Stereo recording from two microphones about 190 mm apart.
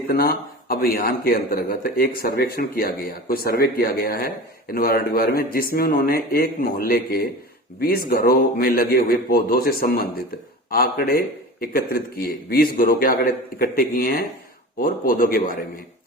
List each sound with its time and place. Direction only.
0.1 s speech: 50° left (ahead or behind)